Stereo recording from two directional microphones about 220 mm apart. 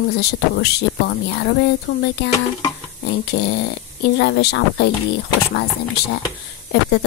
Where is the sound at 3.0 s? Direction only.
50° left (ahead or behind).